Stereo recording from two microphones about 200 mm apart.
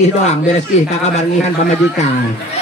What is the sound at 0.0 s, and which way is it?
Speech, 35° left (ahead or behind).